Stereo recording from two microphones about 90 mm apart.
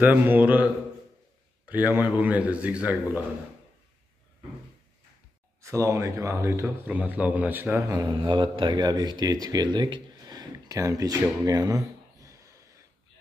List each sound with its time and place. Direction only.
0.0 s a man's voice: 20° right (ahead or behind)
2.0 s a man's voice: 15° right (ahead or behind)
5.6 s speech: 35° right (ahead or behind)
6.8 s a man's voice: 20° right (ahead or behind)
7.8 s speech: 40° right (ahead or behind)
8.2 s speech: 65° right (ahead or behind)
10.2 s a sound: 40° right (ahead or behind)